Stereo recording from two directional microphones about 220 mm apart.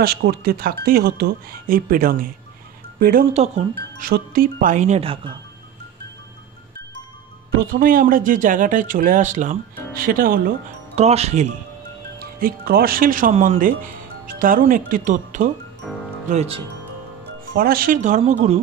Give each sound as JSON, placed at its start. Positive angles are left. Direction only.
{"t": 0.0, "sound": "speech", "side_deg": -45}
{"t": 7.5, "sound": "speech", "side_deg": -40}
{"t": 11.0, "sound": "speech", "side_deg": -30}
{"t": 12.4, "sound": "speech", "side_deg": -40}
{"t": 15.8, "sound": "speech", "side_deg": 0}
{"t": 16.3, "sound": "speech", "side_deg": -30}
{"t": 17.6, "sound": "speech", "side_deg": -40}